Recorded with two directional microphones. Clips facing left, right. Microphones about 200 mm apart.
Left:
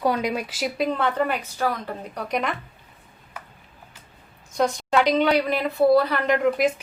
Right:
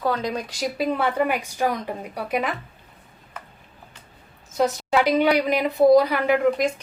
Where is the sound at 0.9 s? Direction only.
10° right (ahead or behind).